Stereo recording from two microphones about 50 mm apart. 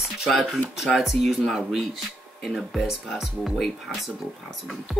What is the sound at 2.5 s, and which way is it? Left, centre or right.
Speech, centre.